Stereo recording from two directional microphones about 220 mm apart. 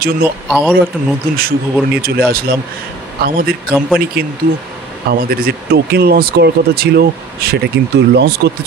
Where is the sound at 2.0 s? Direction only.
45° right (ahead or behind).